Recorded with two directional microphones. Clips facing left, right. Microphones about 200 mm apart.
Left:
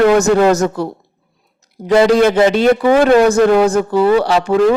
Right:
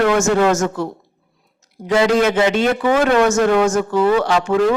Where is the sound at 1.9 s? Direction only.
35° left (ahead or behind).